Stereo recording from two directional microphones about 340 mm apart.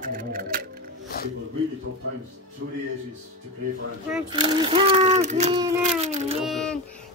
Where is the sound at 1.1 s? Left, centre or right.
Left.